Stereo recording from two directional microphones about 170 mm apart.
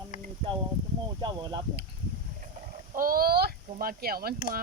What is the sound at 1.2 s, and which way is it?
Speech, 25° right (ahead or behind).